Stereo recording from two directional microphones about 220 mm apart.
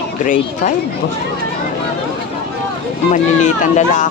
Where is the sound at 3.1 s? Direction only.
35° left (ahead or behind).